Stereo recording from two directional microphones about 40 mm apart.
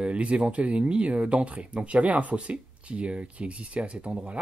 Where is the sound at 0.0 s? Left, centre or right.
Right.